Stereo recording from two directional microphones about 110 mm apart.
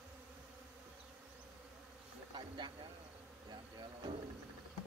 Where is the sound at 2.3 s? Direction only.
45° right (ahead or behind).